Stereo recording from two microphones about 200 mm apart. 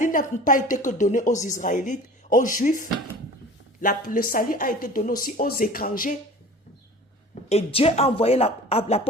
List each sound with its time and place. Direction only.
0.0 s a woman's voice: 40° left (ahead or behind)
7.5 s a woman's voice: 30° left (ahead or behind)